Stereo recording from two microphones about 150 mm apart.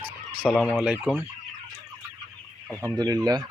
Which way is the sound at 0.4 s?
5° left (ahead or behind).